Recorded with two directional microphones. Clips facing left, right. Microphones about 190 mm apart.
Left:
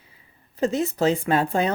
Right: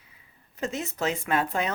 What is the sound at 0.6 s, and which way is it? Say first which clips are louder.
Speech: left 8 dB; 35° left (ahead or behind).